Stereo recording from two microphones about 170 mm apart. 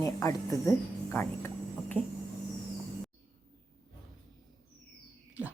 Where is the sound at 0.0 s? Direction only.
15° left (ahead or behind).